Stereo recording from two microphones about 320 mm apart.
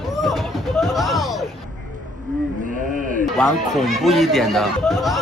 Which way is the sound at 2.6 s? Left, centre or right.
Right.